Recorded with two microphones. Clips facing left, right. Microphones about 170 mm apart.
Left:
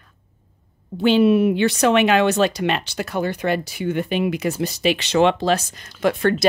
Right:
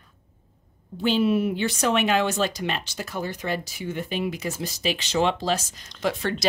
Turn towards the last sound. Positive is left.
turn(degrees=55)  # may be behind; listen again after turning